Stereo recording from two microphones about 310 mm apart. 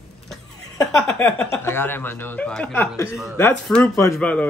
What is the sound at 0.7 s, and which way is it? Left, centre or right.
Speech, centre.